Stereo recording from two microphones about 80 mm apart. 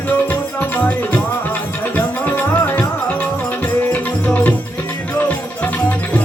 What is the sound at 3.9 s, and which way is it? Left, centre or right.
Music, centre.